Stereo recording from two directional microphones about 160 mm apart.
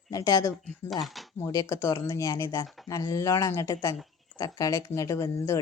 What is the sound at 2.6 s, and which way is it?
Speech, centre (ahead or behind).